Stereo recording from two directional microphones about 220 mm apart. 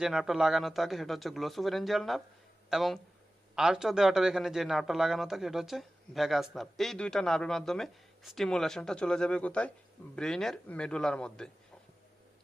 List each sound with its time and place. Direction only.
0.0 s a man's voice: centre (ahead or behind)